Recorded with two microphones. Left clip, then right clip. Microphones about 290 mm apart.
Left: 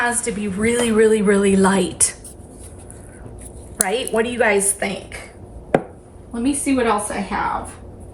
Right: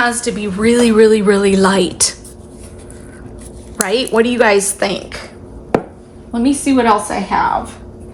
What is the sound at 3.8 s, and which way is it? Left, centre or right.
A woman's voice, centre.